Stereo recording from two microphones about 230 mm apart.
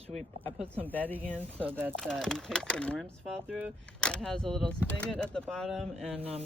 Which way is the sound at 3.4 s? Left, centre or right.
Centre.